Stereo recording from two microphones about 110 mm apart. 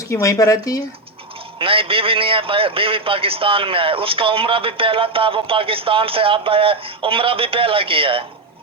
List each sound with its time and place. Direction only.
0.1 s speech: 30° left (ahead or behind)
1.5 s a man's voice: 55° right (ahead or behind)